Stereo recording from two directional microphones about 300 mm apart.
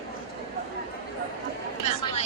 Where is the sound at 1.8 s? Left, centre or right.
Left.